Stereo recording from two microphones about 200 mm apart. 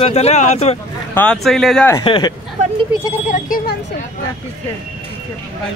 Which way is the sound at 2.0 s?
25° left (ahead or behind).